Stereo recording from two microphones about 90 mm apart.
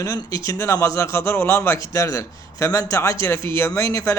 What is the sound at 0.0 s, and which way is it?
A man's voice, 40° left (ahead or behind).